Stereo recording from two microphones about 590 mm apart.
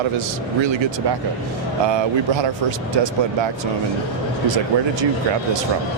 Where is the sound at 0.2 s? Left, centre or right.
Right.